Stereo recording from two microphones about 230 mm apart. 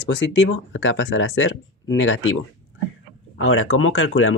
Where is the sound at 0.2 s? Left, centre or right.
Left.